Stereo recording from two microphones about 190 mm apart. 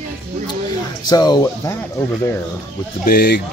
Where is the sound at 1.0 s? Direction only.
20° left (ahead or behind).